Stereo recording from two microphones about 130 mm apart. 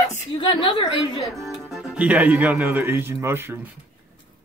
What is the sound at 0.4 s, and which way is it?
Speech, 40° left (ahead or behind).